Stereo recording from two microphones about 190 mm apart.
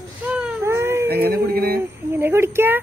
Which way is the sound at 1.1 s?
55° right (ahead or behind).